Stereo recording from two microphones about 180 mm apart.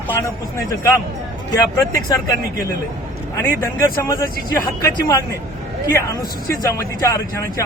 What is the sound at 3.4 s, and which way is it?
Speech, 15° left (ahead or behind).